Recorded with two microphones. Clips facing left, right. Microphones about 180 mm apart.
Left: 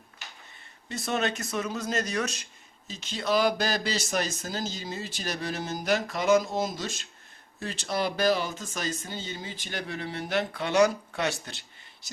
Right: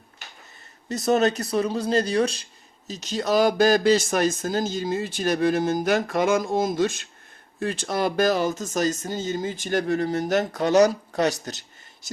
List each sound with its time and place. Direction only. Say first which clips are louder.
0.9 s speech: right 9 dB; 40° right (ahead or behind)